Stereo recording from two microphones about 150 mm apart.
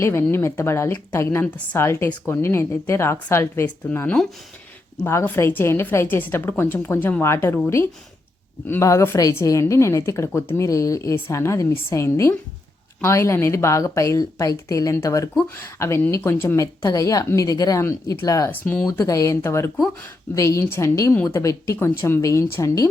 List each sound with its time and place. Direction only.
0.0 s a woman's voice: 15° left (ahead or behind)